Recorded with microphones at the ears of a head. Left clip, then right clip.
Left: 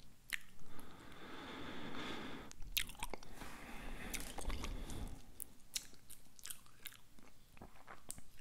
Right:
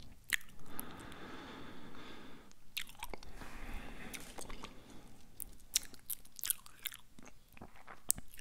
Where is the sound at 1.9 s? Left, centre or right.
Left.